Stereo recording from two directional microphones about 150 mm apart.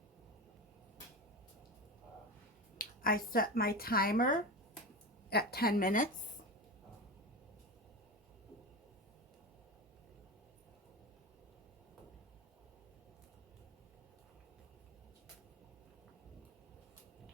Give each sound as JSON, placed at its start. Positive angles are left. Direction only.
{"t": 2.7, "sound": "speech", "side_deg": 70}
{"t": 5.3, "sound": "speech", "side_deg": 90}